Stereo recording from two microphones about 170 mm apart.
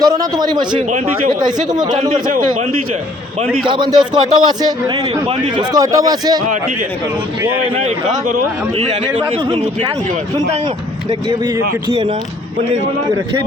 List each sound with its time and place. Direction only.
0.0 s a man's voice: 25° right (ahead or behind)
0.9 s speech: 45° right (ahead or behind)
1.5 s a man's voice: 25° right (ahead or behind)
3.4 s a man's voice: centre (ahead or behind)
3.7 s a man's voice: 25° right (ahead or behind)
9.3 s a man's voice: 35° right (ahead or behind)
11.3 s speech: 15° right (ahead or behind)